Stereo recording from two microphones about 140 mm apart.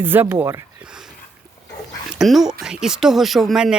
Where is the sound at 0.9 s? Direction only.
5° right (ahead or behind).